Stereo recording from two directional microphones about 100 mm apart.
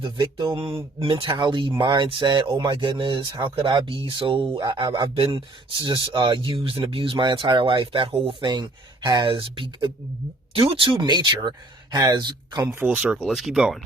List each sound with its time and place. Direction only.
0.0 s speech: 45° right (ahead or behind)
2.5 s speech: 40° right (ahead or behind)
2.7 s speech: 55° right (ahead or behind)
5.0 s speech: 65° right (ahead or behind)
11.0 s speech: 50° right (ahead or behind)
12.6 s speech: 15° right (ahead or behind)
13.2 s speech: centre (ahead or behind)